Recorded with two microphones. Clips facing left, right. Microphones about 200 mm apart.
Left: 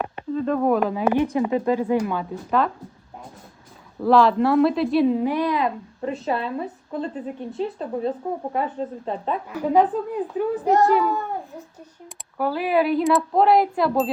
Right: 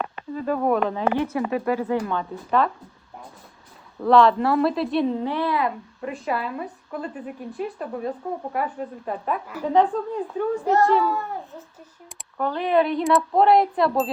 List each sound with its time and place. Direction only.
0.3 s speech: 5° right (ahead or behind); by 2.0 s 15° left (ahead or behind)
2.0 s speech: 5° left (ahead or behind)
4.0 s speech: centre (ahead or behind); by 9.4 s 25° left (ahead or behind)
9.6 s speech: 10° left (ahead or behind)
11.0 s a sound: 15° left (ahead or behind)
12.0 s speech: 5° left (ahead or behind)